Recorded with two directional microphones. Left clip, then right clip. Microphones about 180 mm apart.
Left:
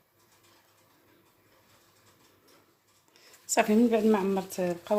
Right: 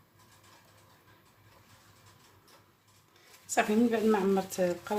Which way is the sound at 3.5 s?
45° left (ahead or behind).